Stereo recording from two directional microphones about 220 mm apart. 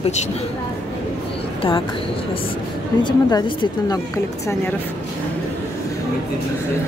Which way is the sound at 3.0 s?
20° left (ahead or behind).